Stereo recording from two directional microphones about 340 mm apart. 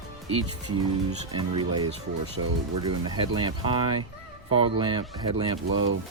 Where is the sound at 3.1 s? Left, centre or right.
Centre.